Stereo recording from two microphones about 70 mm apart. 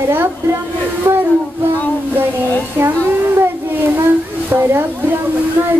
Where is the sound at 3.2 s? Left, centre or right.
Right.